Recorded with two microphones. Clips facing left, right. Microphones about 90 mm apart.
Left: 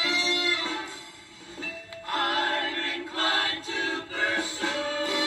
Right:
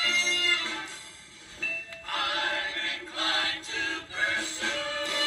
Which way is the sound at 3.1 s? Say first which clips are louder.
Left 4 dB; 45° left (ahead or behind).